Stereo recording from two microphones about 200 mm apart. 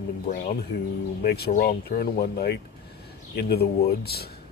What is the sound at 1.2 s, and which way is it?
Speech, 50° left (ahead or behind).